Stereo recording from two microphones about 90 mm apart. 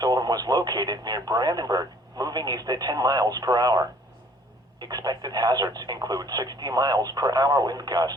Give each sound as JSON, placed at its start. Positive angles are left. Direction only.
{"t": 0.0, "sound": "speech", "side_deg": -45}